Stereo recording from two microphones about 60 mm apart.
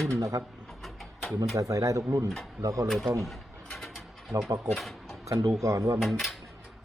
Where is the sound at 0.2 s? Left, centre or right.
Right.